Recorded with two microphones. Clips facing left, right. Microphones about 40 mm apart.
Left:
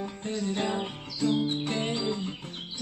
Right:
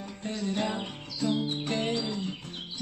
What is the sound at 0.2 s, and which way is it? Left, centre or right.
Music, centre.